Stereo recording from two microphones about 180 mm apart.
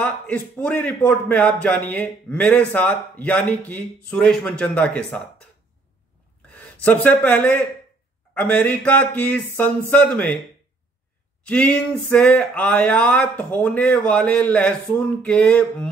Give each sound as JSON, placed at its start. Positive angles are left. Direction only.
{"t": 0.0, "sound": "a man's voice", "side_deg": 10}
{"t": 6.5, "sound": "a man's voice", "side_deg": 10}
{"t": 11.4, "sound": "a man's voice", "side_deg": 5}